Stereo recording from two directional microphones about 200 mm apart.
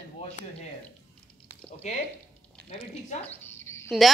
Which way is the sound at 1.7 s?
30° left (ahead or behind).